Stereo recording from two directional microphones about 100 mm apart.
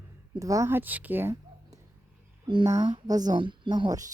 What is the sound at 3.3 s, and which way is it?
Speech, 55° right (ahead or behind).